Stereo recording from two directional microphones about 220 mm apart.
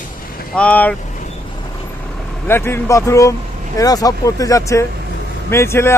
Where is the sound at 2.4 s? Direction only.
10° left (ahead or behind).